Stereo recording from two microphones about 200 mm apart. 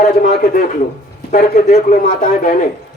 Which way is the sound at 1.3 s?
40° left (ahead or behind).